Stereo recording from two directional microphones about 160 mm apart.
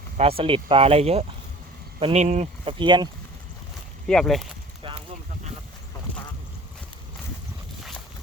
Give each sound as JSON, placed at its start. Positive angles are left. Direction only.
{"t": 0.2, "sound": "speech", "side_deg": -35}
{"t": 2.7, "sound": "speech", "side_deg": -30}
{"t": 4.0, "sound": "speech", "side_deg": 5}
{"t": 4.8, "sound": "a sound", "side_deg": -35}